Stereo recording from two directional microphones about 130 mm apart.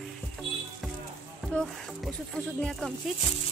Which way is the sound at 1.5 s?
10° left (ahead or behind).